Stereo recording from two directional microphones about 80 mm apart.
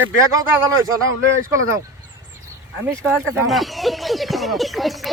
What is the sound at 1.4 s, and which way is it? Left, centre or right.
Speech, right.